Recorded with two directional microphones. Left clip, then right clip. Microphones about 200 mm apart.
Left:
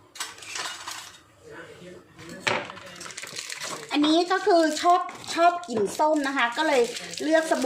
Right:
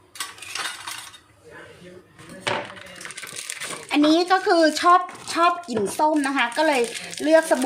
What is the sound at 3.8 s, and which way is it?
A woman's voice, 40° right (ahead or behind).